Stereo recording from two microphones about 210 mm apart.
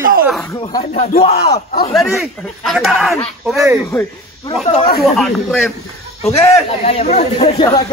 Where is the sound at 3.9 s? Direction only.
15° left (ahead or behind).